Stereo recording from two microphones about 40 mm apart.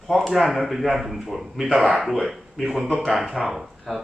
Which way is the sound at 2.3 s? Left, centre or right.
Centre.